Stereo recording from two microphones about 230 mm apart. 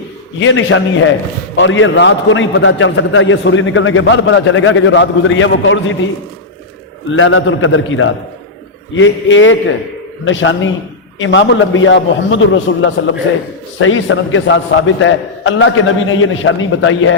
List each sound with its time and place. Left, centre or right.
0.3 s a man's voice: left
7.1 s a man's voice: left